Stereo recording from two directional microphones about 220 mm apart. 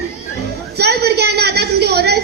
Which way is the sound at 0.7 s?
50° right (ahead or behind).